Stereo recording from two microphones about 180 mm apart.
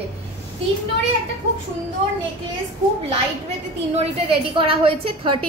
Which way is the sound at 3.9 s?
30° right (ahead or behind).